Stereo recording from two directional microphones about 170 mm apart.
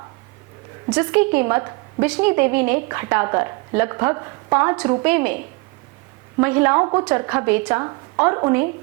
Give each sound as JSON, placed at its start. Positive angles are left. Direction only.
{"t": 0.9, "sound": "a woman's voice", "side_deg": -10}
{"t": 6.4, "sound": "a woman's voice", "side_deg": -15}